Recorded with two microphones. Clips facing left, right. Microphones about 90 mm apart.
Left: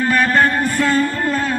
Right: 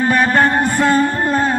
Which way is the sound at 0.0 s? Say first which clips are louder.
Right 1 dB; 25° right (ahead or behind).